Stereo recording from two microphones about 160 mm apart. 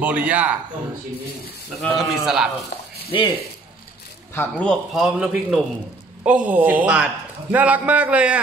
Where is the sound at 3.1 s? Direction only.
30° left (ahead or behind).